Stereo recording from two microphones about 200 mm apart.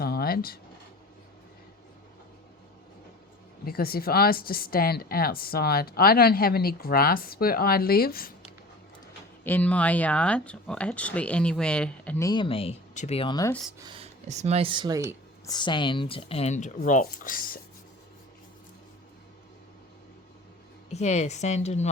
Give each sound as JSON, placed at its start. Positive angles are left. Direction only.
{"t": 0.0, "sound": "a sound", "side_deg": 50}
{"t": 3.7, "sound": "a woman's voice", "side_deg": 50}
{"t": 9.4, "sound": "speech", "side_deg": 10}
{"t": 13.7, "sound": "speech", "side_deg": -25}
{"t": 15.4, "sound": "speech", "side_deg": 20}
{"t": 20.9, "sound": "speech", "side_deg": 35}